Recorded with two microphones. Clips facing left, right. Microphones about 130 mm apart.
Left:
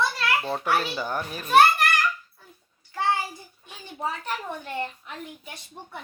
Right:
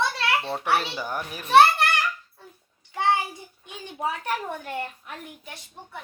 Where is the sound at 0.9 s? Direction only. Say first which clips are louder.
Left 2 dB; 10° right (ahead or behind).